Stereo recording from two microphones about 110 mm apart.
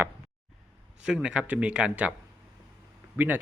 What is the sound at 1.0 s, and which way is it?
Speech, 10° right (ahead or behind).